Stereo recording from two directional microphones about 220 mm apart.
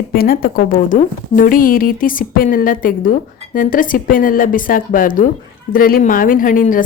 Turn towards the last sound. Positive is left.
turn(degrees=40)  # may be behind; listen again after turning